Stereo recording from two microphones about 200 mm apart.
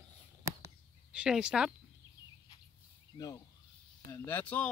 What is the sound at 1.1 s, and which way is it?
Speech, 5° right (ahead or behind).